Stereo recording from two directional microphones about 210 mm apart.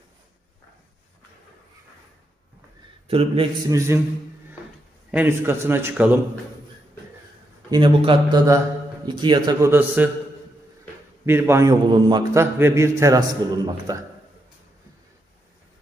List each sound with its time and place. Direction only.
3.1 s a man's voice: 25° right (ahead or behind)
3.7 s a man's voice: 15° right (ahead or behind)
5.1 s a man's voice: 10° right (ahead or behind)
7.7 s a man's voice: 25° right (ahead or behind)
11.2 s a man's voice: 10° right (ahead or behind)